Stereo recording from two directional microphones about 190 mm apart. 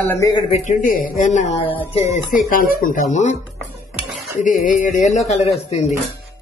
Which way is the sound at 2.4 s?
45° left (ahead or behind).